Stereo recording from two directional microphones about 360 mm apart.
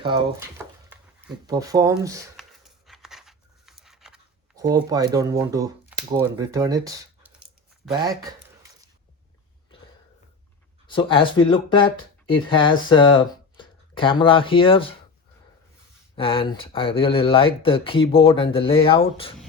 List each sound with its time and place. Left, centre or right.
0.6 s a sound: centre
7.9 s speech: centre
10.8 s speech: centre
16.1 s speech: centre